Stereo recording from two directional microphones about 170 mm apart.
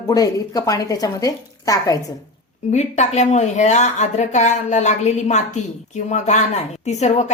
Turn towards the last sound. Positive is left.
turn(degrees=40)  # may be behind; listen again after turning